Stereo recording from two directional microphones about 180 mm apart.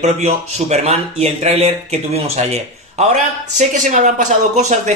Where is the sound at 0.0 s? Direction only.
40° right (ahead or behind).